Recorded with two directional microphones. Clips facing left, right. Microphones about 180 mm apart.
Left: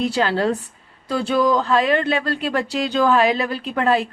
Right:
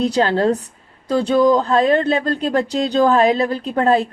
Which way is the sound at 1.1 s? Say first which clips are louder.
Right 4 dB; 25° right (ahead or behind).